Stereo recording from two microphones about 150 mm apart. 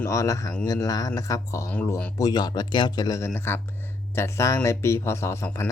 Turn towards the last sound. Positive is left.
turn(degrees=20)  # may be behind; listen again after turning